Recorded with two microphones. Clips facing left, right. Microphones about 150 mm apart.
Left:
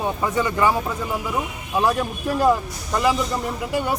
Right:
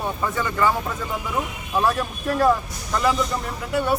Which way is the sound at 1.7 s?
10° left (ahead or behind).